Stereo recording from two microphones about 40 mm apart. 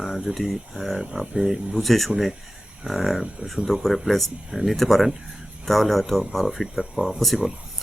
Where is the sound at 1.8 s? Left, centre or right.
Centre.